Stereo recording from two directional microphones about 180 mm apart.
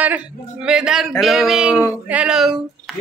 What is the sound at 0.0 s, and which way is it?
Speech, 10° right (ahead or behind).